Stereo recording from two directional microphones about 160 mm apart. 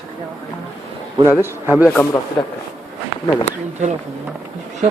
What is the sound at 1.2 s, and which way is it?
Speech, 15° right (ahead or behind).